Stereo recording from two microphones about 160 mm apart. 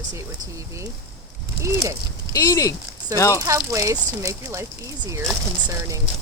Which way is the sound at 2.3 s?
20° left (ahead or behind).